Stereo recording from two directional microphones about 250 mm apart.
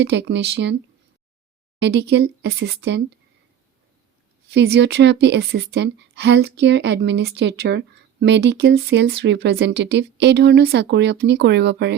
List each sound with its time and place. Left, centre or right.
0.0 s a woman's voice: right
1.8 s a woman's voice: right
4.5 s a woman's voice: right